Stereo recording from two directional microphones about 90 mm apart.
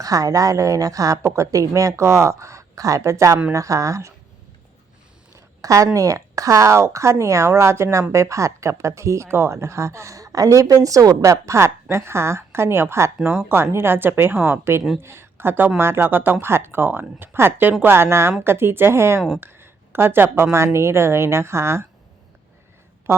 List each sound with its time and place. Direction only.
0.0 s speech: 40° right (ahead or behind)
5.6 s a woman's voice: 40° right (ahead or behind)
23.1 s speech: 30° right (ahead or behind)